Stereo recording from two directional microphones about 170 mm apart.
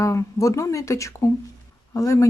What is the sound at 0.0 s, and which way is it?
Speech, 20° left (ahead or behind).